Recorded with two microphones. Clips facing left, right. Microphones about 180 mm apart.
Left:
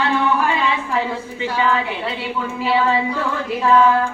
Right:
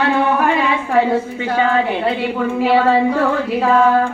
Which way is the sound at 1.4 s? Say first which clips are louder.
Right 3 dB; 50° right (ahead or behind).